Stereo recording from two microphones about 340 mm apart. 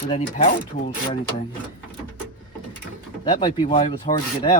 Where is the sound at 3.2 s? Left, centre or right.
Centre.